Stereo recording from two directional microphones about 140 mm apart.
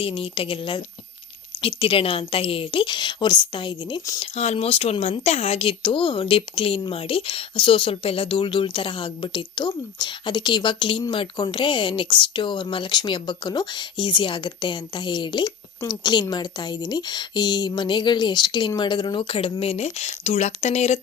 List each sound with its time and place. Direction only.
0.0 s speech: 40° left (ahead or behind)
1.8 s speech: 40° left (ahead or behind)
4.2 s speech: 45° left (ahead or behind)